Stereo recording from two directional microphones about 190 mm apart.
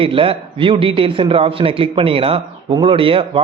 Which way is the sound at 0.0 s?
30° right (ahead or behind).